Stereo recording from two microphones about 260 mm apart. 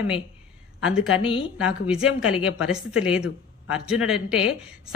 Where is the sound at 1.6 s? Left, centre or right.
Centre.